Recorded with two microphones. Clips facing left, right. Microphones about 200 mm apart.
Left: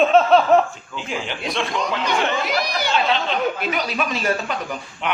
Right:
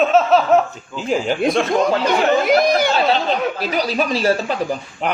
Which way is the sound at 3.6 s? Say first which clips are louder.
Right 4 dB; 35° right (ahead or behind).